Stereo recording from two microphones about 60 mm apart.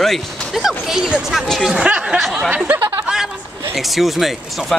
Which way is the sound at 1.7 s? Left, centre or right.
Centre.